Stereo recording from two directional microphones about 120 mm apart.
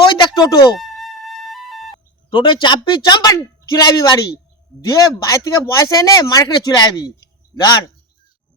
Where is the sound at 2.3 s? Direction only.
45° left (ahead or behind).